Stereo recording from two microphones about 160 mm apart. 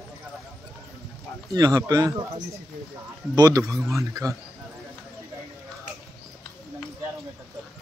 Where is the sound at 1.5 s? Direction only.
25° right (ahead or behind).